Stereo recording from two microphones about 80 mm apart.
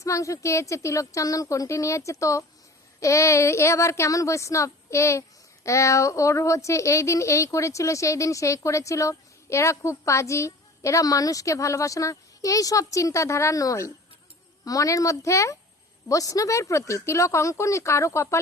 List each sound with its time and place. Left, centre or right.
0.0 s speech: left